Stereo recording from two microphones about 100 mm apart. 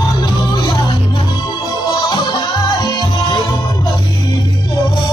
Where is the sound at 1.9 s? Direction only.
45° left (ahead or behind).